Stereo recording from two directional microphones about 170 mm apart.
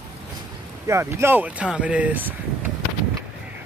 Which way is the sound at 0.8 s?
15° right (ahead or behind).